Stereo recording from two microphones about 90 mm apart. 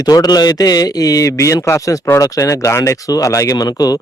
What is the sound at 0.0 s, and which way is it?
A man's voice, 45° left (ahead or behind).